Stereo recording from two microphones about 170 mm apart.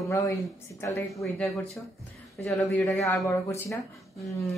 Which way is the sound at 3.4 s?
15° left (ahead or behind).